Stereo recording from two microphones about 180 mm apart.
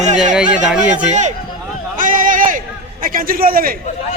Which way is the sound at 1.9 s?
50° right (ahead or behind).